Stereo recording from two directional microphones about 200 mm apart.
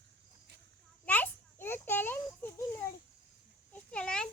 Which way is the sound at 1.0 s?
10° left (ahead or behind).